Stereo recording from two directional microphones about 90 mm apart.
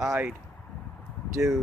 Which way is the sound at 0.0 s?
10° right (ahead or behind).